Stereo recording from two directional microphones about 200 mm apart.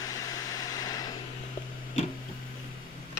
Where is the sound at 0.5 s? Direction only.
20° left (ahead or behind).